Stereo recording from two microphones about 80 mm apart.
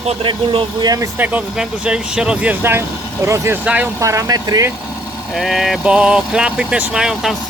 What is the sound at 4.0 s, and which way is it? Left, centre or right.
Speech, right.